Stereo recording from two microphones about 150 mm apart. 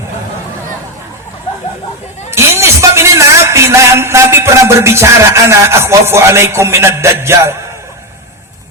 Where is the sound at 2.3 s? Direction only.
20° right (ahead or behind).